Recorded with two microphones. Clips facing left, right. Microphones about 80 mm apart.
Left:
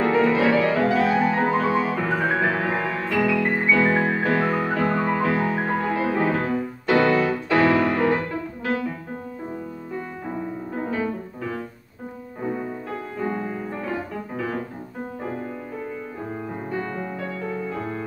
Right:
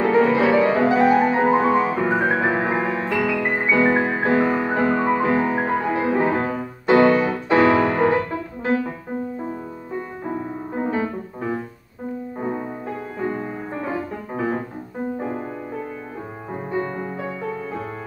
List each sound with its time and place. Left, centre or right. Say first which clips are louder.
0.0 s music: right 2 dB; centre
10.7 s music: right 3 dB; right
13.4 s music: right 1 dB; right
16.7 s music: right 4 dB; right